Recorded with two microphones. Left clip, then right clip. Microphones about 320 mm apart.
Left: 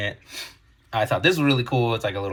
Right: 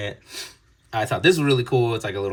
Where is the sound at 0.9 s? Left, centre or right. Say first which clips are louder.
Right 1 dB; centre.